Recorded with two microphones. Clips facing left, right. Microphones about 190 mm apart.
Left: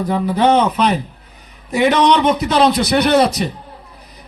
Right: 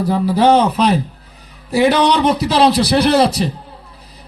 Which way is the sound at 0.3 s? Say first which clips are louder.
Right 1 dB; 35° right (ahead or behind).